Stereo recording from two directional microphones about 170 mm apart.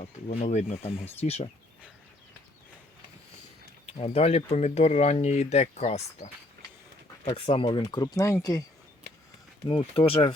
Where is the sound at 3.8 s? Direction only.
35° left (ahead or behind); by 8.6 s 20° left (ahead or behind).